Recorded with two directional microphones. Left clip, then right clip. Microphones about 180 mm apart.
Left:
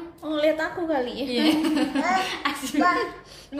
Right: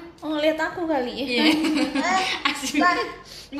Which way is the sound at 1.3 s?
35° left (ahead or behind).